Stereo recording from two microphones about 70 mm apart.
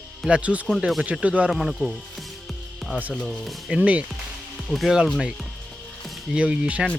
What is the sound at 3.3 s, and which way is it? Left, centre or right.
Speech, centre.